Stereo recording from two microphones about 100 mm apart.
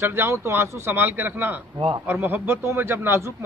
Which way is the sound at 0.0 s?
25° right (ahead or behind).